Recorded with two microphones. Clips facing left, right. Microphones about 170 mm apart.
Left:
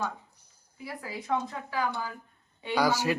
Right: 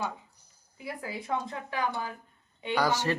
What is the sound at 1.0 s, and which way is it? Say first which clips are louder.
A woman's voice: left 2 dB; 25° right (ahead or behind).